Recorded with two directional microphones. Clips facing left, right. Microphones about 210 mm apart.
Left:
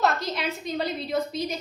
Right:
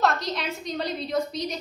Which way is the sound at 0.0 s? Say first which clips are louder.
Even; centre (ahead or behind).